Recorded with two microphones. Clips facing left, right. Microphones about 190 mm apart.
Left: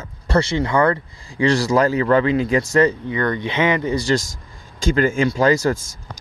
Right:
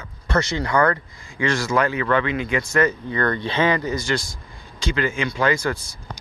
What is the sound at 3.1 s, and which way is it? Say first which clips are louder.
Speech: left 1 dB; 15° left (ahead or behind).